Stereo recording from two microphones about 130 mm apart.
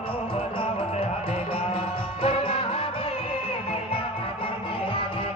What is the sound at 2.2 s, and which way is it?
Music, 45° left (ahead or behind).